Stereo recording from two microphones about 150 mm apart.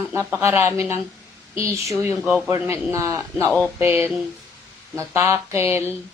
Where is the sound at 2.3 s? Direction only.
15° right (ahead or behind).